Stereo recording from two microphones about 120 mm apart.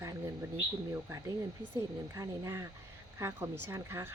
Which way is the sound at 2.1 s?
20° right (ahead or behind).